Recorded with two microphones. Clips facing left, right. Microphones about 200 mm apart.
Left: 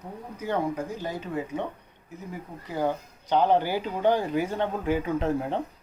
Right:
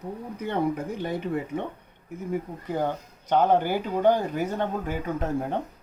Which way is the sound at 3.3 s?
50° right (ahead or behind).